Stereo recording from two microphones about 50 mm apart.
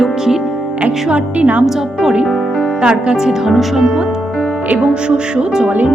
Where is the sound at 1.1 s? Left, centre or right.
Right.